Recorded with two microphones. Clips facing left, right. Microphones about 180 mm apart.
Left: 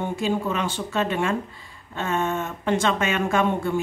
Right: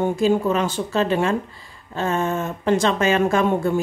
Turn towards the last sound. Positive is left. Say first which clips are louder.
# right 4 dB
turn(degrees=-35)  # may be behind; listen again after turning